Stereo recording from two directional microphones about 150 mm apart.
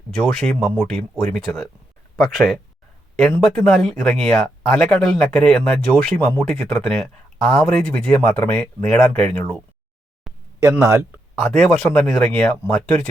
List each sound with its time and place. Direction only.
0.2 s speech: 5° left (ahead or behind)
3.2 s speech: 5° left (ahead or behind)
10.3 s a sound: centre (ahead or behind)
10.6 s speech: 20° right (ahead or behind)
11.5 s speech: 5° left (ahead or behind)